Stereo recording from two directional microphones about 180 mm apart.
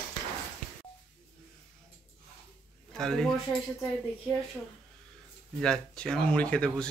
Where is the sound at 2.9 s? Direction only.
5° left (ahead or behind).